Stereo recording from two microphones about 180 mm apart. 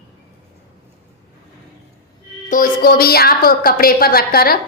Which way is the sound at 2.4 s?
50° left (ahead or behind).